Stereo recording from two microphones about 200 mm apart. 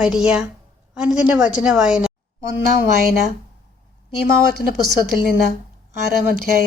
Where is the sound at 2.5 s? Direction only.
60° left (ahead or behind).